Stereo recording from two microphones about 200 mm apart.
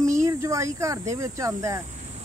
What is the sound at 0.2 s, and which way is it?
Speech, 15° right (ahead or behind).